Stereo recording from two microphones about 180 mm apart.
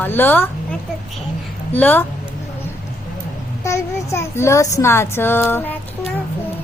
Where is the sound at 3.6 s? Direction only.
15° left (ahead or behind).